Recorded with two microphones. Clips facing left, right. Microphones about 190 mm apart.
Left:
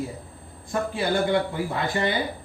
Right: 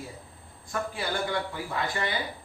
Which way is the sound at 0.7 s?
25° left (ahead or behind).